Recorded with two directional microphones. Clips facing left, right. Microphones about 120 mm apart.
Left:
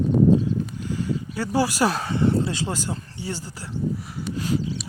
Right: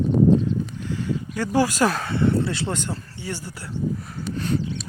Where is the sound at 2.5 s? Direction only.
15° left (ahead or behind).